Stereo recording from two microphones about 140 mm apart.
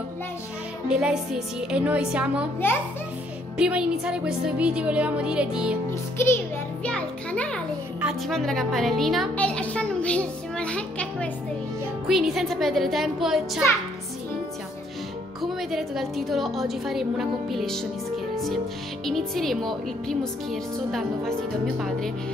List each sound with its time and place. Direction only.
0.8 s speech: 5° right (ahead or behind)
2.6 s a child's voice: 15° left (ahead or behind)
3.5 s speech: 5° right (ahead or behind)
5.9 s a child's voice: 15° left (ahead or behind)
6.9 s music: 10° left (ahead or behind)
8.0 s a child's voice: centre (ahead or behind)
15.4 s speech: centre (ahead or behind)
18.3 s music: centre (ahead or behind)
19.0 s speech: centre (ahead or behind)